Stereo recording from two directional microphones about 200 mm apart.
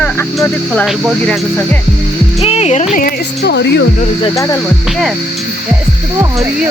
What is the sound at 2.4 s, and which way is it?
Music, 30° left (ahead or behind).